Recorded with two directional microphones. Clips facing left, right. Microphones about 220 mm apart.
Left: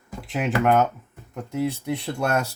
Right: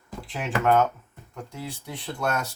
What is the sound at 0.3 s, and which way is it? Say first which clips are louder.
Speech: left 3 dB; 15° left (ahead or behind).